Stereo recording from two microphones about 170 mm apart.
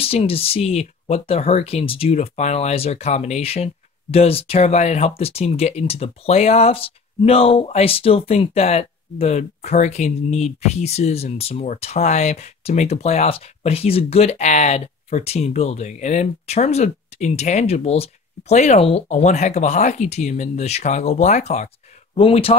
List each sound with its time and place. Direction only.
0.0 s speech: 35° left (ahead or behind)